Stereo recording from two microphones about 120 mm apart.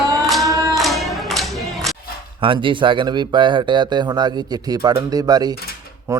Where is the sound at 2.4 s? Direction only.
45° right (ahead or behind).